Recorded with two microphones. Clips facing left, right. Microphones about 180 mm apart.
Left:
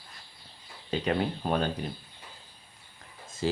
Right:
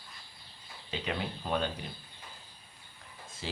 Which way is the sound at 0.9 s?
45° left (ahead or behind).